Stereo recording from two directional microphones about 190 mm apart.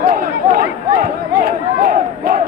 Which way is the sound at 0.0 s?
50° right (ahead or behind).